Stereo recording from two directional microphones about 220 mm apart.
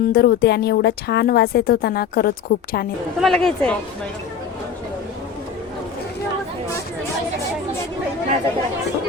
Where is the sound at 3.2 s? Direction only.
Centre (ahead or behind).